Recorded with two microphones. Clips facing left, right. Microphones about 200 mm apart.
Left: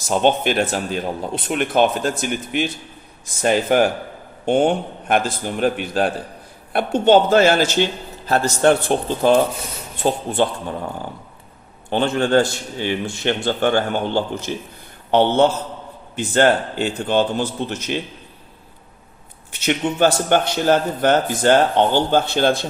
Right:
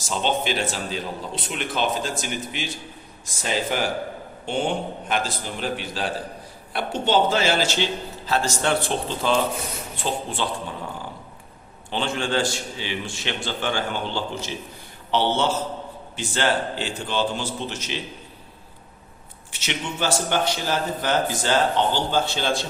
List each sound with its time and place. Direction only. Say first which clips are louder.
0.1 s a man's voice: left 7 dB; 55° left (ahead or behind)
11.9 s a man's voice: left 8 dB; 55° left (ahead or behind)
19.5 s a man's voice: left 9 dB; 55° left (ahead or behind)